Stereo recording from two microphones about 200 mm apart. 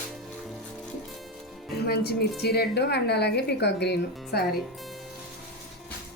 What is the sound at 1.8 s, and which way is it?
A woman's voice, 55° left (ahead or behind).